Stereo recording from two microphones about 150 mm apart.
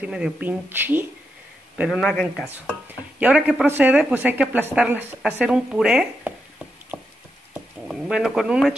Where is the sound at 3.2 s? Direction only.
5° right (ahead or behind).